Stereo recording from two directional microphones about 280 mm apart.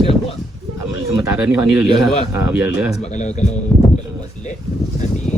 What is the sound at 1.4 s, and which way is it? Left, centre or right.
A man's voice, centre.